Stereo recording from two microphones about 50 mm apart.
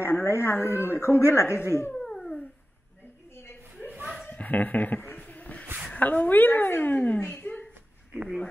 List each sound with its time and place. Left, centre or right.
0.0 s a woman's voice: left
1.6 s a woman's voice: left
2.0 s cat: centre
4.3 s a sound: left
5.9 s a woman's voice: left
7.5 s a sound: left